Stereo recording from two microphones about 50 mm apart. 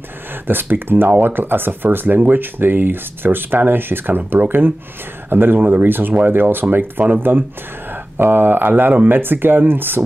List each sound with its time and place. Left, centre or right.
0.5 s speech: right